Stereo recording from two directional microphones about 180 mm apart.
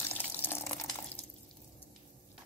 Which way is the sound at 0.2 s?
10° left (ahead or behind).